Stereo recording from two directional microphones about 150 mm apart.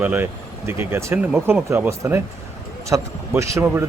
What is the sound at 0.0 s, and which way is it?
A man's voice, 10° right (ahead or behind).